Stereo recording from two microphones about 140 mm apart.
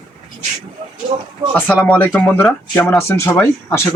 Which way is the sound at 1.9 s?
15° left (ahead or behind).